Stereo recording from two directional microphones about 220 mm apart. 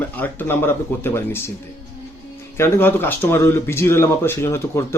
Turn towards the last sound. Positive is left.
turn(degrees=10)  # may be behind; listen again after turning